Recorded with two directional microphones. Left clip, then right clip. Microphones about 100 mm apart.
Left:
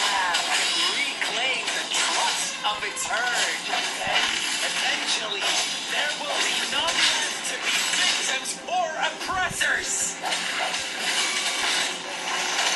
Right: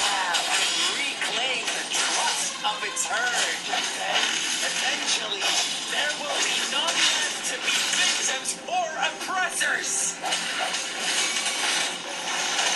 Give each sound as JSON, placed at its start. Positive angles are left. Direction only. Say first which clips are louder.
{"t": 0.0, "sound": "music", "louder": "left 1 dB", "side_deg": -25}
{"t": 3.3, "sound": "speech", "louder": "left 1 dB", "side_deg": -25}
{"t": 10.6, "sound": "a sound", "louder": "left 1 dB", "side_deg": -25}